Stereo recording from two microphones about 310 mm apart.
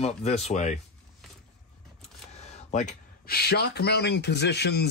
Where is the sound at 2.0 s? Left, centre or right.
Left.